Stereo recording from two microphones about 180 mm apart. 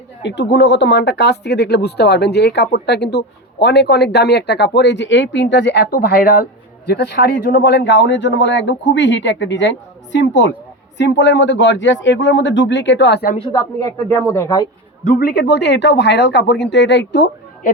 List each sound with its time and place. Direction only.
0.2 s speech: 70° left (ahead or behind)
13.5 s speech: 15° left (ahead or behind)
15.0 s speech: 55° left (ahead or behind)